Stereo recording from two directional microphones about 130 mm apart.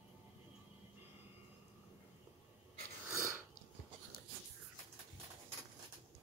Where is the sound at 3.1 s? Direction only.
20° right (ahead or behind).